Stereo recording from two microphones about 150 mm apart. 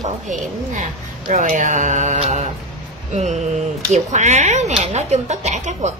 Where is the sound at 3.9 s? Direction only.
55° right (ahead or behind).